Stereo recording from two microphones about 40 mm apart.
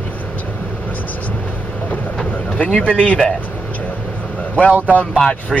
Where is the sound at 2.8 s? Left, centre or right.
Left.